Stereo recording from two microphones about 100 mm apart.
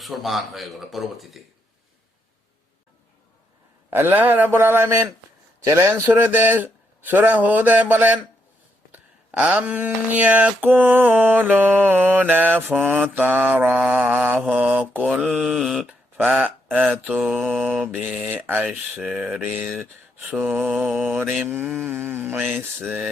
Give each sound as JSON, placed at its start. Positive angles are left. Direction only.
{"t": 0.0, "sound": "speech", "side_deg": 0}
{"t": 3.8, "sound": "speech", "side_deg": -25}
{"t": 5.6, "sound": "mantra", "side_deg": -25}
{"t": 8.9, "sound": "a sound", "side_deg": -15}
{"t": 10.9, "sound": "mantra", "side_deg": -20}
{"t": 15.2, "sound": "speech", "side_deg": -5}
{"t": 16.1, "sound": "mantra", "side_deg": -15}
{"t": 17.9, "sound": "speech", "side_deg": -20}
{"t": 18.9, "sound": "mantra", "side_deg": -5}
{"t": 19.8, "sound": "speech", "side_deg": -20}
{"t": 20.7, "sound": "speech", "side_deg": 0}
{"t": 20.9, "sound": "mantra", "side_deg": -15}
{"t": 21.7, "sound": "speech", "side_deg": -5}
{"t": 21.9, "sound": "mantra", "side_deg": -15}